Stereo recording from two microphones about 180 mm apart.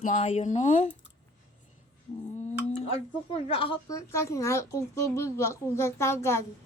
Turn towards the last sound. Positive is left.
turn(degrees=15)  # may be behind; listen again after turning